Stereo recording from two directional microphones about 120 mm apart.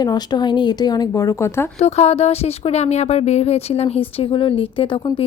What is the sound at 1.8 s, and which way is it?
Speech, 60° left (ahead or behind).